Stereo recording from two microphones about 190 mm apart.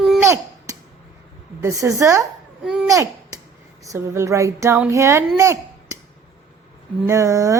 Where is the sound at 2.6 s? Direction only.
5° right (ahead or behind).